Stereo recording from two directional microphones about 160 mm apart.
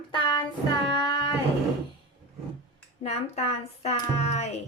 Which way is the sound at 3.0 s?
40° left (ahead or behind).